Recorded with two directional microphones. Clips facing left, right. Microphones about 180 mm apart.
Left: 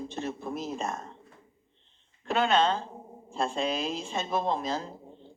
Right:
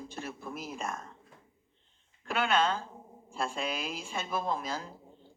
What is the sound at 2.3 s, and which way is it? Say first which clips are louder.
A woman's voice: left 4 dB; 35° left (ahead or behind).